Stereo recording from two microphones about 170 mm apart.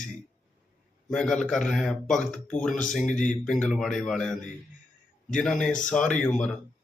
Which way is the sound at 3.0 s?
50° left (ahead or behind).